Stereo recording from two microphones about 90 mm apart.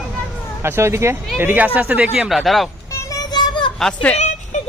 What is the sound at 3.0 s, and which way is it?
Child singing, 45° left (ahead or behind).